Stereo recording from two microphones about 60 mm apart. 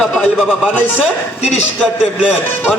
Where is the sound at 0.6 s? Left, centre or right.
Left.